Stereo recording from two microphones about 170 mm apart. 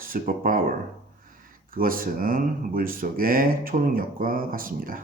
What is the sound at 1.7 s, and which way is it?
A man's voice, 55° right (ahead or behind).